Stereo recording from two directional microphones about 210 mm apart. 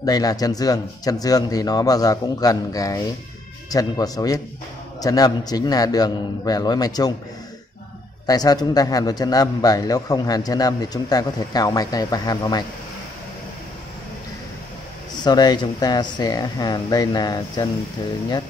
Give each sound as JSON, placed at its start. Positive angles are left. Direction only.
{"t": 0.0, "sound": "a man's voice", "side_deg": 15}
{"t": 8.3, "sound": "a man's voice", "side_deg": 20}
{"t": 15.2, "sound": "speech", "side_deg": 20}